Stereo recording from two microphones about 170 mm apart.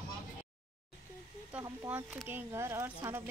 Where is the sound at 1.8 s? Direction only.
10° right (ahead or behind).